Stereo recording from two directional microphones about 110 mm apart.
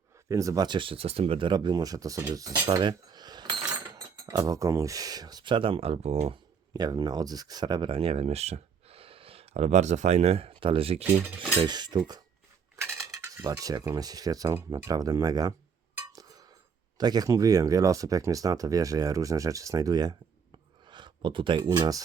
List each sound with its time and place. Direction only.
0.3 s speech: 30° right (ahead or behind); by 6.3 s 75° right (ahead or behind)
6.7 s speech: 40° right (ahead or behind); by 11.0 s 60° right (ahead or behind)
11.3 s speech: 45° right (ahead or behind)
12.7 s cutlery: 25° right (ahead or behind)
16.1 s a sound: 35° right (ahead or behind)
17.0 s speech: 40° right (ahead or behind)